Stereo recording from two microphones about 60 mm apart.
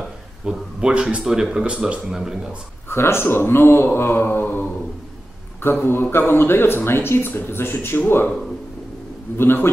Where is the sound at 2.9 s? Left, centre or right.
Left.